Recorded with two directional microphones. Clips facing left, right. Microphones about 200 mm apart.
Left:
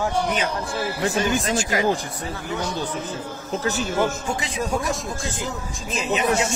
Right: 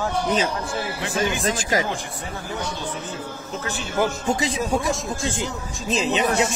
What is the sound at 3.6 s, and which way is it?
Speech, 40° left (ahead or behind).